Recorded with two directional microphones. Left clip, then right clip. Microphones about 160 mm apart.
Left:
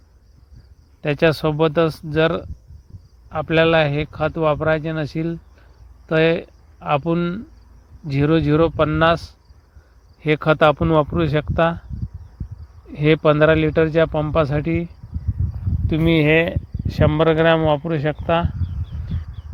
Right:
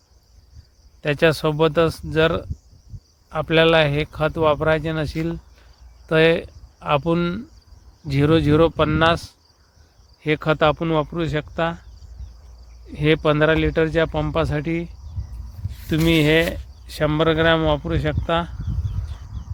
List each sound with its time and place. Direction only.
1.0 s speech: 20° left (ahead or behind)
10.2 s speech: 30° left (ahead or behind)
12.9 s speech: 25° left (ahead or behind)
15.9 s speech: 15° left (ahead or behind)